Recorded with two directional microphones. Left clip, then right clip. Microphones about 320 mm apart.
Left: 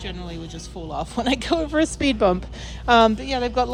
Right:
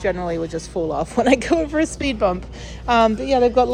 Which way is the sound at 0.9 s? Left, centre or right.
Centre.